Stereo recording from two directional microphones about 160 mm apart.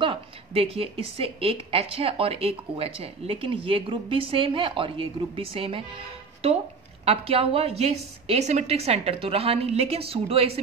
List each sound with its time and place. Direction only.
0.0 s a woman's voice: 35° right (ahead or behind)